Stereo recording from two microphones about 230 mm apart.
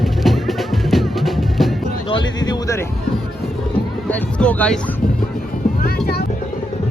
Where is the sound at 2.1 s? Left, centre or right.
Centre.